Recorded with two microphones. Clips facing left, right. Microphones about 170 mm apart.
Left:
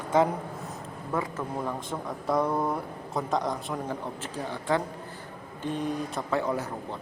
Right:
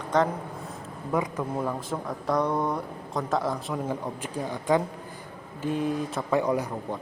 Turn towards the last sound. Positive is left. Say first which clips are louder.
# right 3 dB
turn(degrees=-15)  # may be behind; listen again after turning